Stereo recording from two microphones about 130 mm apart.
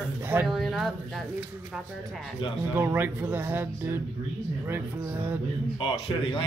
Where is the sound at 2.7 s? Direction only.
15° right (ahead or behind).